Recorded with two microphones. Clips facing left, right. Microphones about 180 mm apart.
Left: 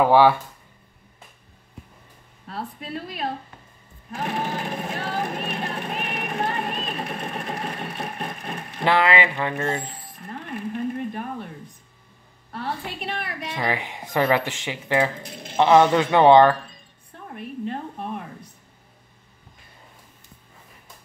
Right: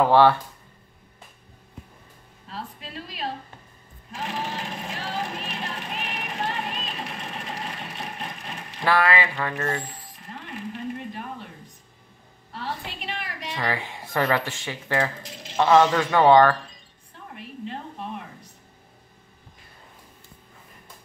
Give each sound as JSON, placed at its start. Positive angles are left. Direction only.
{"t": 0.0, "sound": "speech", "side_deg": 10}
{"t": 2.4, "sound": "a woman's voice", "side_deg": 55}
{"t": 4.1, "sound": "a sound", "side_deg": 55}
{"t": 8.8, "sound": "speech", "side_deg": 20}
{"t": 10.1, "sound": "music", "side_deg": 55}
{"t": 12.5, "sound": "a sound", "side_deg": 55}
{"t": 13.6, "sound": "speech", "side_deg": 15}
{"t": 16.1, "sound": "speech", "side_deg": 25}
{"t": 17.4, "sound": "a sound", "side_deg": 50}